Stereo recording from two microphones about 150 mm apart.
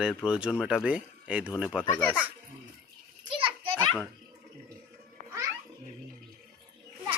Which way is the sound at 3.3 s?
35° right (ahead or behind).